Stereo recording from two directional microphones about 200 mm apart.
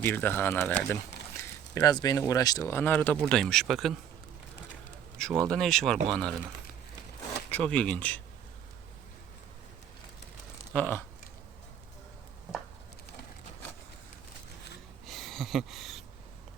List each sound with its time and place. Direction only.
0.0 s speech: 10° left (ahead or behind)
1.7 s speech: 20° left (ahead or behind); by 3.9 s centre (ahead or behind)
5.1 s speech: 5° left (ahead or behind)
7.5 s speech: 5° left (ahead or behind)
10.7 s a sound: 10° left (ahead or behind)
15.0 s a sound: centre (ahead or behind)